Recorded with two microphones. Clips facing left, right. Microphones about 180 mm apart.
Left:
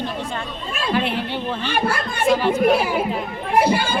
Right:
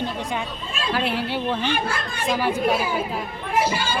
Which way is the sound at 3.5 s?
60° left (ahead or behind).